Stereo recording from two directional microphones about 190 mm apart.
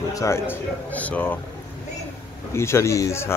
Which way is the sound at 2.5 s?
15° left (ahead or behind).